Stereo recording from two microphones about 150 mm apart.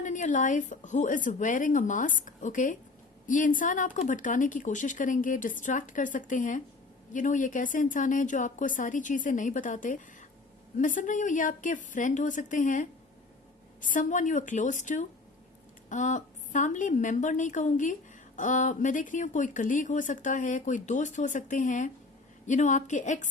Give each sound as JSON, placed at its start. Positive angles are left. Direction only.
{"t": 0.0, "sound": "speech", "side_deg": 55}